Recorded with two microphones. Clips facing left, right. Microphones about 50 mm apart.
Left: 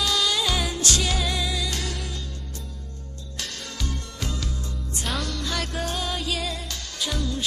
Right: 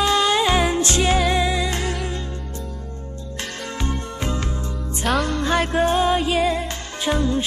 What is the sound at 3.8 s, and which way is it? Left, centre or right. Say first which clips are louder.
Music: right 7 dB; right.